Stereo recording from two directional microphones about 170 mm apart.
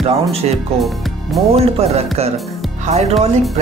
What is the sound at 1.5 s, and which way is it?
A man's voice, 35° right (ahead or behind).